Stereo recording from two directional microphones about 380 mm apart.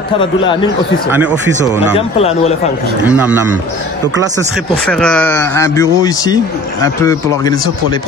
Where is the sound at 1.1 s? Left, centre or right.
Centre.